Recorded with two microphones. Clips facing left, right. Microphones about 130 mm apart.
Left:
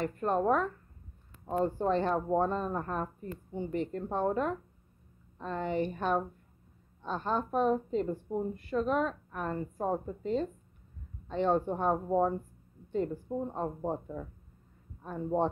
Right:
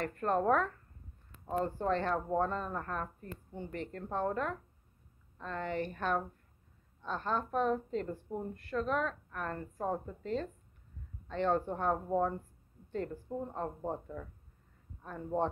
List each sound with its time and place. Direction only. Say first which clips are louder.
0.0 s a woman's voice: left 2 dB; 10° left (ahead or behind)